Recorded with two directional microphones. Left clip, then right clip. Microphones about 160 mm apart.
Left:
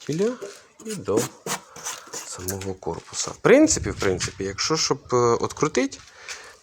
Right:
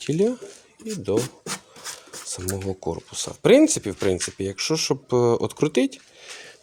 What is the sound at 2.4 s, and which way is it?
Speech, 20° right (ahead or behind).